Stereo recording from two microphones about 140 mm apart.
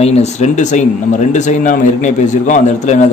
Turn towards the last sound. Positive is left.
turn(degrees=55)  # may be behind; listen again after turning